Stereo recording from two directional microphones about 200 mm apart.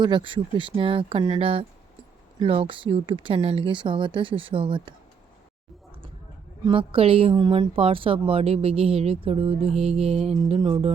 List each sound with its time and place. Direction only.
0.0 s a woman's voice: 25° right (ahead or behind)
6.7 s a woman's voice: 25° right (ahead or behind)